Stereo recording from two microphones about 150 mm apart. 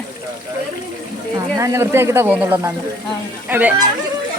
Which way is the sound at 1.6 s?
20° right (ahead or behind).